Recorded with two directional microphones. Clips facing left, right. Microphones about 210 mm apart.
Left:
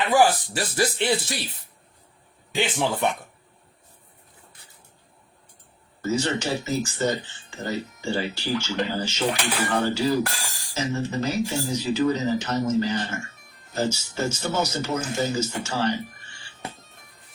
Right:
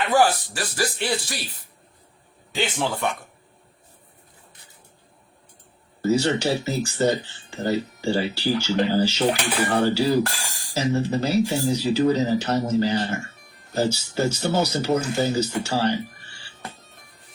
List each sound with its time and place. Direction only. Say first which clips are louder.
0.1 s a man's voice: even; 20° left (ahead or behind)
6.0 s speech: right 4 dB; 35° right (ahead or behind)
15.8 s music: right 2 dB; 35° right (ahead or behind)